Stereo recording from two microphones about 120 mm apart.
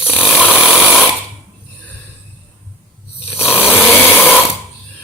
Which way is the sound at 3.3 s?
15° left (ahead or behind).